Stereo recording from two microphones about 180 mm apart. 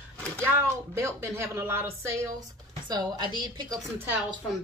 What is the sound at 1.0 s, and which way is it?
A woman's voice, 15° right (ahead or behind).